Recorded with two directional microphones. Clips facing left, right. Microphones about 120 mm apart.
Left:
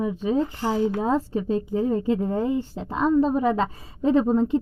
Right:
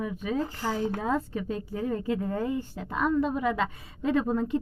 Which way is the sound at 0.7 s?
15° left (ahead or behind).